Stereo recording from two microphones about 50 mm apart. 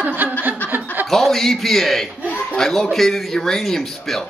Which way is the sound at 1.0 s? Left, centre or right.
Centre.